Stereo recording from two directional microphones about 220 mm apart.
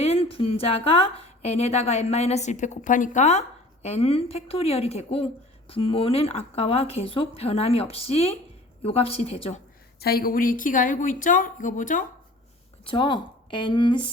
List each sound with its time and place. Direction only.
0.0 s a woman's voice: 25° left (ahead or behind)
10.0 s speech: 45° left (ahead or behind)
12.8 s a woman's voice: 20° left (ahead or behind)